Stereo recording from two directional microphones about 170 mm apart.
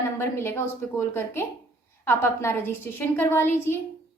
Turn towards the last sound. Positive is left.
turn(degrees=15)  # may be behind; listen again after turning